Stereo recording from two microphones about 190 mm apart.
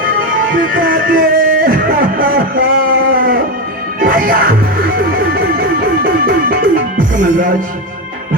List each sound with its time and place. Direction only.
0.1 s music: 45° right (ahead or behind)
7.2 s speech: 45° right (ahead or behind)